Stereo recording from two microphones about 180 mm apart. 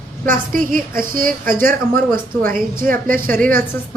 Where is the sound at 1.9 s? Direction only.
10° left (ahead or behind).